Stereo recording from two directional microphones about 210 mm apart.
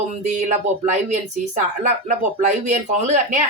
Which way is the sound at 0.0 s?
35° right (ahead or behind).